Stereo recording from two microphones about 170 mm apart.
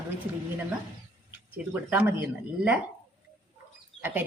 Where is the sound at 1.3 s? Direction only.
10° right (ahead or behind).